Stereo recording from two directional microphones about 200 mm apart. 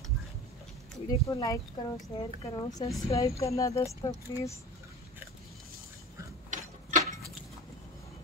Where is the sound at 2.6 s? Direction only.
20° left (ahead or behind).